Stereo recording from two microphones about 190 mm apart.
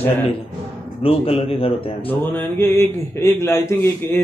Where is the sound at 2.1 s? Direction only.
10° left (ahead or behind).